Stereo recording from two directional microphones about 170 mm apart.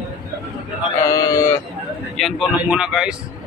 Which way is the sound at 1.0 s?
20° left (ahead or behind).